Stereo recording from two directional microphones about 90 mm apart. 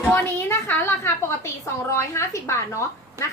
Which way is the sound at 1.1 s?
30° left (ahead or behind).